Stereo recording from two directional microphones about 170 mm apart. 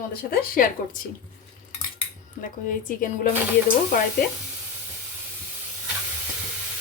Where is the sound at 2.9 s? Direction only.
55° left (ahead or behind).